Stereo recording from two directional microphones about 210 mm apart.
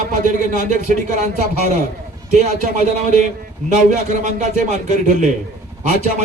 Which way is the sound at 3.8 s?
35° right (ahead or behind).